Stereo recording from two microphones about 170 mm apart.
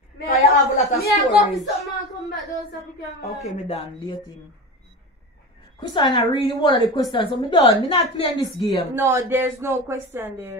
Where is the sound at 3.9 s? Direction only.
25° left (ahead or behind).